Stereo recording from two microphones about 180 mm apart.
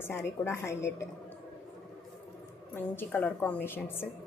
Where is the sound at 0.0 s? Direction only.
15° left (ahead or behind).